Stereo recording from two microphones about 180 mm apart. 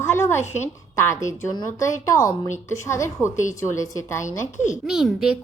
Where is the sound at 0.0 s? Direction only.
15° left (ahead or behind).